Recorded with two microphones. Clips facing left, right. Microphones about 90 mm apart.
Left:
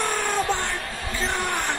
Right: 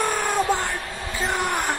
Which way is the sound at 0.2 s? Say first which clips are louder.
Right 2 dB; 10° right (ahead or behind).